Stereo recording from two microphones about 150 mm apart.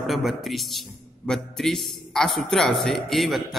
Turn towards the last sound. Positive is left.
turn(degrees=0)  # may be behind; listen again after turning